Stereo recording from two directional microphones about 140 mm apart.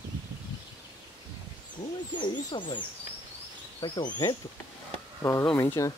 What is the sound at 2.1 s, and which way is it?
Speech, 35° left (ahead or behind).